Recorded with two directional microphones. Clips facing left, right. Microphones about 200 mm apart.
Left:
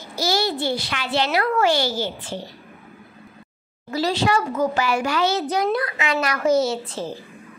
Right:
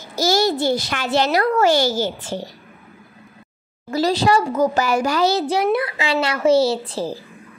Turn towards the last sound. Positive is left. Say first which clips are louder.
# right 4 dB
turn(degrees=-35)  # may be behind; listen again after turning